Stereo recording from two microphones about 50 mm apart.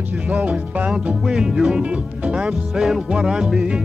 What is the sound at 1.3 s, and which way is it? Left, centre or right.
Music, centre.